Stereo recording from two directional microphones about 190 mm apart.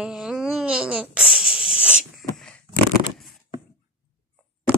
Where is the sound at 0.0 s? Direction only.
5° right (ahead or behind).